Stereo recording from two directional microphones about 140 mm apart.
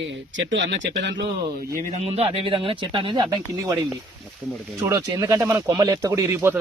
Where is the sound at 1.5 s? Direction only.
90° right.